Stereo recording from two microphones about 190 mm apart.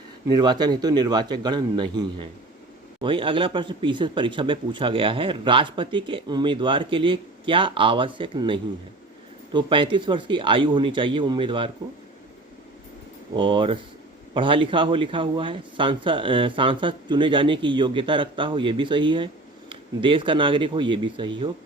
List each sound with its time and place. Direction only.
0.3 s speech: 20° right (ahead or behind)
13.3 s speech: 25° right (ahead or behind)